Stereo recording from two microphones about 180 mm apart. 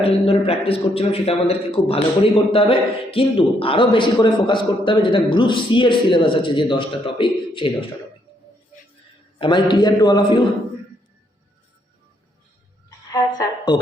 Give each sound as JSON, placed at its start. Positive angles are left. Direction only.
{"t": 0.0, "sound": "a man's voice", "side_deg": 35}
{"t": 9.4, "sound": "a man's voice", "side_deg": 25}
{"t": 13.1, "sound": "a sound", "side_deg": 25}